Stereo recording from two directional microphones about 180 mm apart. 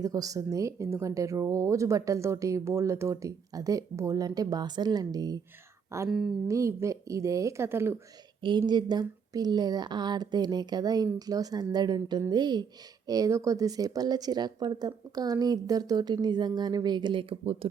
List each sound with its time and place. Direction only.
0.0 s speech: 20° right (ahead or behind)
6.1 s speech: centre (ahead or behind)
6.5 s speech: 15° right (ahead or behind)
8.4 s speech: 25° right (ahead or behind)